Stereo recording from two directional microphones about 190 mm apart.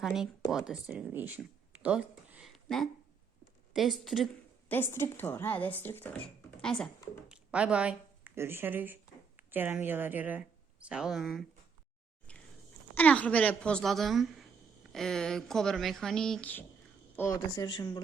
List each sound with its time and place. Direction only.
0.0 s a woman's voice: centre (ahead or behind)
4.7 s a woman's voice: 10° left (ahead or behind)
12.9 s speech: 10° left (ahead or behind)